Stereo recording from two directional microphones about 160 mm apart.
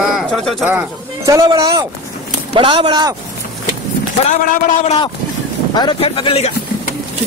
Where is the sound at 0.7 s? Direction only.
15° right (ahead or behind).